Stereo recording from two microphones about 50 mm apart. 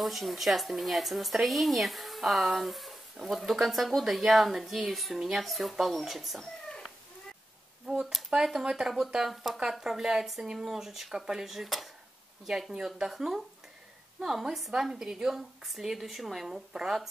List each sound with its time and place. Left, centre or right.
0.0 s speech: centre
7.9 s a sound: centre
8.3 s speech: right
8.6 s speech: centre